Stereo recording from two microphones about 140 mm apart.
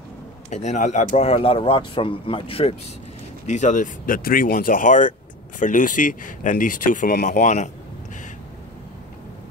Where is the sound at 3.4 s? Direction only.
60° left (ahead or behind).